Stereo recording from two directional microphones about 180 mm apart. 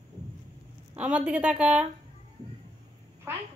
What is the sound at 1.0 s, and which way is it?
Speech, 5° right (ahead or behind).